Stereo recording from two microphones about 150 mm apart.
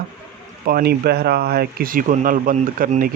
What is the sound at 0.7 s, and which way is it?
Speech, 90° right.